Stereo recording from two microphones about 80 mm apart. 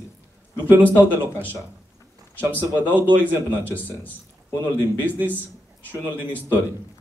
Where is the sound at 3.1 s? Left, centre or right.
Right.